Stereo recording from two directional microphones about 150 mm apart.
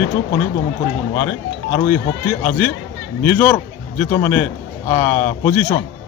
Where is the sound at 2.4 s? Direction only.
15° left (ahead or behind).